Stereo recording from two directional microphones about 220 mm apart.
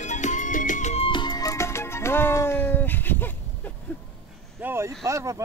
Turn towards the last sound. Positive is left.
turn(degrees=-15)  # may be behind; listen again after turning